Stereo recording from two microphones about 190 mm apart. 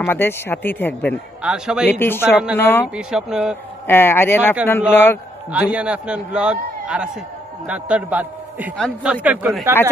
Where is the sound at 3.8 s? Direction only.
10° left (ahead or behind).